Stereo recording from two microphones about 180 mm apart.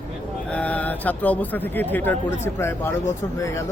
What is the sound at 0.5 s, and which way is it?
Speech, 10° left (ahead or behind).